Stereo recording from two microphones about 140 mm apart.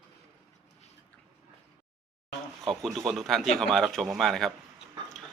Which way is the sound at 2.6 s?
Centre (ahead or behind).